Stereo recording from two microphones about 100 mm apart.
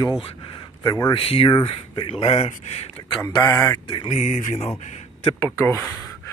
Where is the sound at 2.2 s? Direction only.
90° left.